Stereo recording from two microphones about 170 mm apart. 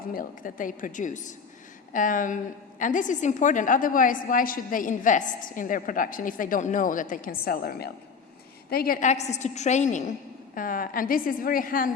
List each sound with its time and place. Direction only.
0.1 s a woman's voice: 55° left (ahead or behind)
9.0 s a woman's voice: 40° left (ahead or behind)